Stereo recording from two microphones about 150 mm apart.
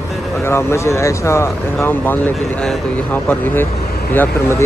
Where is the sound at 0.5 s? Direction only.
15° left (ahead or behind).